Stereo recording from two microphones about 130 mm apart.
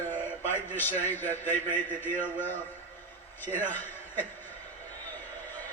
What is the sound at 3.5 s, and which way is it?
Speech, 15° left (ahead or behind).